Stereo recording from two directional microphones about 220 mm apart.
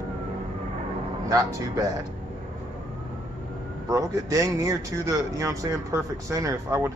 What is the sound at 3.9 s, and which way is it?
Speech, 15° right (ahead or behind).